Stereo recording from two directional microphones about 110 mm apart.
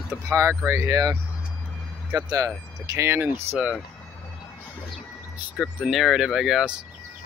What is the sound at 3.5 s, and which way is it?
Speech, 10° right (ahead or behind).